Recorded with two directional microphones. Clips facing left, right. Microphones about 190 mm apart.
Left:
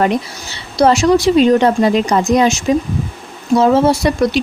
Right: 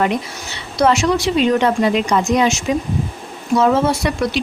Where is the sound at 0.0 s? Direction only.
35° left (ahead or behind).